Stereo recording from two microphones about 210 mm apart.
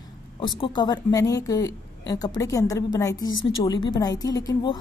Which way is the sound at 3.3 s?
65° left (ahead or behind).